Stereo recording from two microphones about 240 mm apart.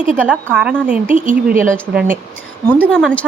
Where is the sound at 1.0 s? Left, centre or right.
Right.